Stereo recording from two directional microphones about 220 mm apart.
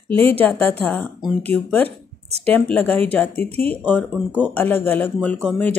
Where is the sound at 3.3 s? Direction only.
25° right (ahead or behind).